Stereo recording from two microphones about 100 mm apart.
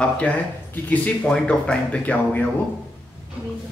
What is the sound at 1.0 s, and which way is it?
Speech, 10° left (ahead or behind).